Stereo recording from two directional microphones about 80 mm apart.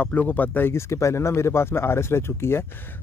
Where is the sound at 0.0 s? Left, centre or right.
Left.